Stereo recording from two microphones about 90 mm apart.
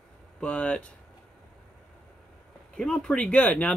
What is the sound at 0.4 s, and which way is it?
Speech, 15° left (ahead or behind).